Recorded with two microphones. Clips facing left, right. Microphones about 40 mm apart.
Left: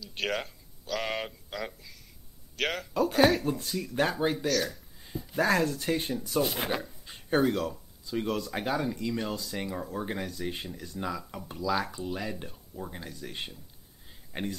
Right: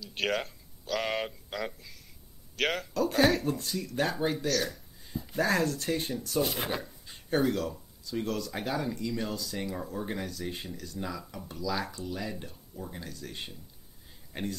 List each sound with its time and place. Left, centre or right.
0.0 s speech: centre
4.5 s speech: centre
7.1 s a sound: centre
8.0 s a man's voice: centre